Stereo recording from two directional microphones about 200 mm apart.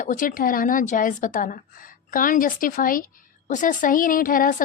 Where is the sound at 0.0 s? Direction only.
40° left (ahead or behind).